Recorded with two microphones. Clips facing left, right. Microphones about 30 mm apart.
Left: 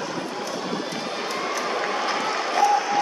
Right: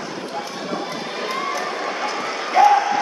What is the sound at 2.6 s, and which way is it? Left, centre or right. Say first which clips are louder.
Applause: right 7 dB; right.